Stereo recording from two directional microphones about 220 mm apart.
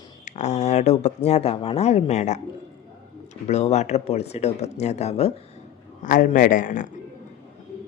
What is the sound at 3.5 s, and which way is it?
Speech, 30° left (ahead or behind).